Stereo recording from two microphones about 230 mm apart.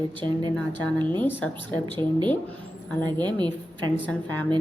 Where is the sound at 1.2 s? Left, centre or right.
Centre.